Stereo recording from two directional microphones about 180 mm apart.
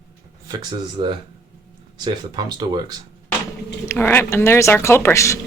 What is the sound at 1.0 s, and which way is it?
Speech, 30° right (ahead or behind).